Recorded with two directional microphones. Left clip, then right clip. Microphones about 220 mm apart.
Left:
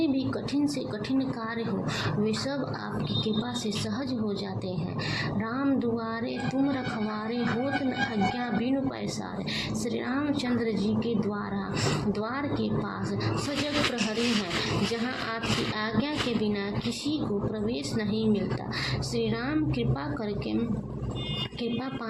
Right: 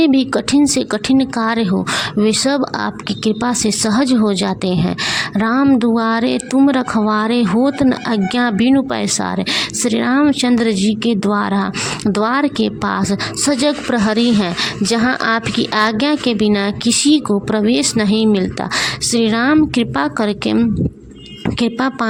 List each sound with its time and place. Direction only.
0.0 s speech: 45° right (ahead or behind)
14.6 s speech: 45° right (ahead or behind)
21.6 s speech: 45° right (ahead or behind)